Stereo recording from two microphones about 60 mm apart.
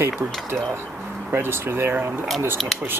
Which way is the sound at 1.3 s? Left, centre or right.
Right.